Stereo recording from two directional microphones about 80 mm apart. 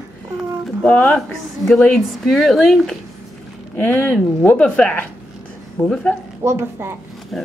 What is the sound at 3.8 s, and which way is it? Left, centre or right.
Speech, left.